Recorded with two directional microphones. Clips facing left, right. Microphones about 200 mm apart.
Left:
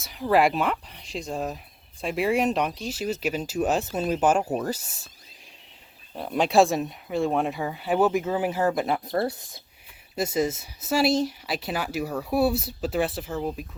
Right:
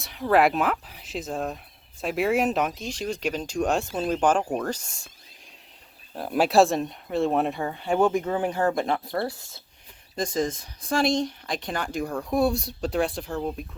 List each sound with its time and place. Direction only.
0.0 s speech: centre (ahead or behind)
6.1 s speech: 5° right (ahead or behind)
9.0 s speech: 20° left (ahead or behind)
10.2 s speech: 10° left (ahead or behind)